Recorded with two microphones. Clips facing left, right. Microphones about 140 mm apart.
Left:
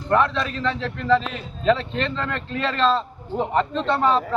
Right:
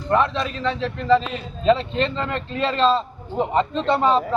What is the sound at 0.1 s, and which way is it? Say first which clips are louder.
A man's voice: even; 20° right (ahead or behind).